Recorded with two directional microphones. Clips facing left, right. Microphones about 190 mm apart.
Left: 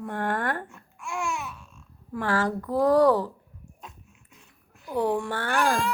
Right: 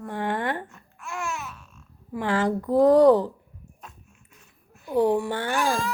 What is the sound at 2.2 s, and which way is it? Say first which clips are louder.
Speech: right 2 dB; 20° right (ahead or behind).